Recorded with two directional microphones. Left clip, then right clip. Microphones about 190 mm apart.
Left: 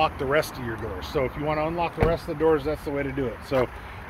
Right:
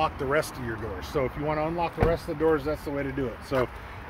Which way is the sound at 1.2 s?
5° right (ahead or behind).